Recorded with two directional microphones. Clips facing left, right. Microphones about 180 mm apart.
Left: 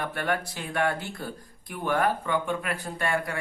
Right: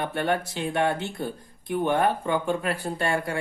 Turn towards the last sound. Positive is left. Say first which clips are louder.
# right 3 dB
turn(degrees=-30)  # may be behind; listen again after turning